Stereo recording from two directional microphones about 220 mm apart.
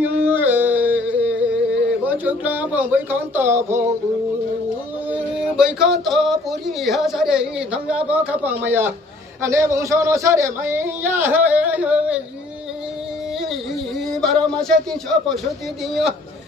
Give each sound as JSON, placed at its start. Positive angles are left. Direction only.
{"t": 0.0, "sound": "music", "side_deg": -10}
{"t": 5.1, "sound": "a sound", "side_deg": -5}
{"t": 6.8, "sound": "a man's voice", "side_deg": 0}
{"t": 14.2, "sound": "speech", "side_deg": 0}